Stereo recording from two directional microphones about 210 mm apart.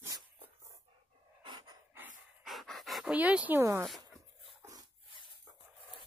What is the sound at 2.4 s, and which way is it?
Pant, centre (ahead or behind).